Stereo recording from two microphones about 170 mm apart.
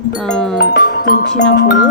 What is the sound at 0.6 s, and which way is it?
Speech, 65° left (ahead or behind).